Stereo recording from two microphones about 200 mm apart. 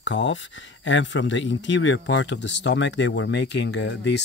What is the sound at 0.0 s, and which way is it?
Speech, 65° left (ahead or behind).